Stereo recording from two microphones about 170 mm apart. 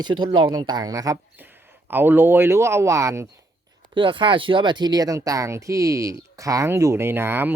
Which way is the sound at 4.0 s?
30° right (ahead or behind).